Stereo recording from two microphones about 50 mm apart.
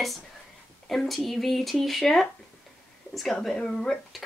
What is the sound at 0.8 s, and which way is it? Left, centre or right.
Speech, centre.